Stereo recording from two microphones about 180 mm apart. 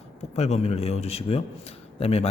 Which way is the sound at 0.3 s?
35° left (ahead or behind).